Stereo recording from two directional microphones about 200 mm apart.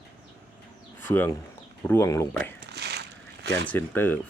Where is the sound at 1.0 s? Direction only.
10° left (ahead or behind).